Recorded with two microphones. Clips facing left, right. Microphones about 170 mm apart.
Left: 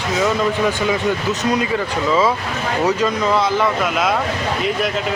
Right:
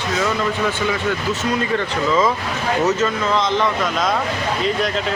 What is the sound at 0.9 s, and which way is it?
Speech, 20° left (ahead or behind).